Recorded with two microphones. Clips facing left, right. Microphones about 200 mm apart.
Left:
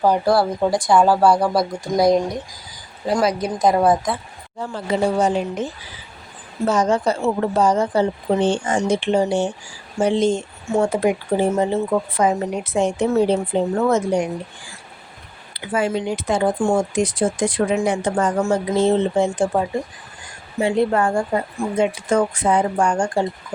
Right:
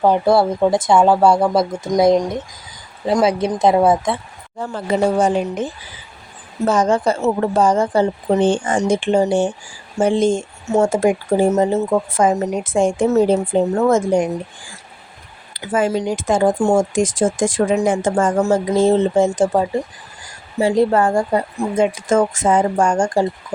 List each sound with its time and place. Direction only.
0.0 s speech: 25° right (ahead or behind)
4.5 s speech: 50° right (ahead or behind)
6.7 s speech: 50° right (ahead or behind)
15.6 s speech: 45° right (ahead or behind)